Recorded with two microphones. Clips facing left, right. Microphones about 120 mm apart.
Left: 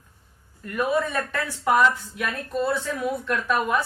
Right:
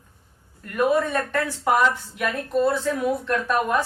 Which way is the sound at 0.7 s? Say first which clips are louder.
Right 3 dB; 45° right (ahead or behind).